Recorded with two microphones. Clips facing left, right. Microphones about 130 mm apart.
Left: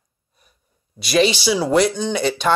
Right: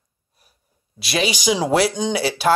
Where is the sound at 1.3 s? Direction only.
15° right (ahead or behind).